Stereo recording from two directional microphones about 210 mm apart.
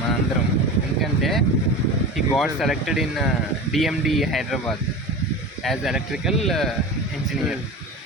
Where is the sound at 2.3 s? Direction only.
Centre (ahead or behind).